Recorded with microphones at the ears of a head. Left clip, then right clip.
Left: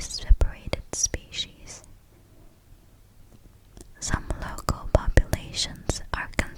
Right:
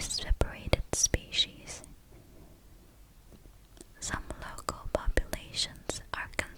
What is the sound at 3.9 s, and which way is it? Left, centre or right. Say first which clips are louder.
Whispering: left 6 dB; left.